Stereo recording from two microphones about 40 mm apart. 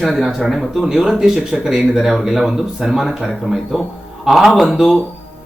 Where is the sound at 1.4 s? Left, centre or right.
Centre.